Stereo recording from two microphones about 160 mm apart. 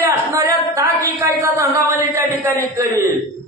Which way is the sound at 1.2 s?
20° right (ahead or behind).